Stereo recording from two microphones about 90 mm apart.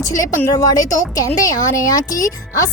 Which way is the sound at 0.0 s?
40° left (ahead or behind).